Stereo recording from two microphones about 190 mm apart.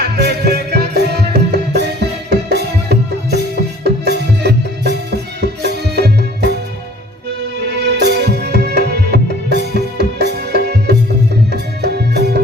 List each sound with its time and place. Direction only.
0.0 s music: 60° right (ahead or behind)
7.8 s music: 60° right (ahead or behind)